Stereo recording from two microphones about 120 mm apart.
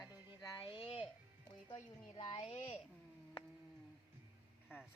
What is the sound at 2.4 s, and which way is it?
Speech, 55° left (ahead or behind).